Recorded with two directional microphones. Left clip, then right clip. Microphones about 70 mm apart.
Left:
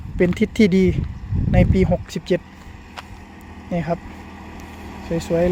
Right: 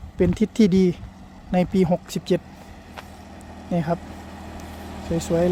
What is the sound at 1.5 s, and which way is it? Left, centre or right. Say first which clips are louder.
Speech: left 2 dB; right.